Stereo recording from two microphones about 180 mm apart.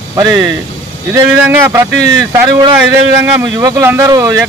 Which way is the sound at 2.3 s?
15° right (ahead or behind).